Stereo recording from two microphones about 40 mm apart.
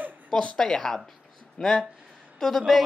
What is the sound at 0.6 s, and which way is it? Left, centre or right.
Speech, centre.